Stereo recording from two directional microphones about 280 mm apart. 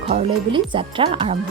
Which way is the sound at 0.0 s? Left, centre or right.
Right.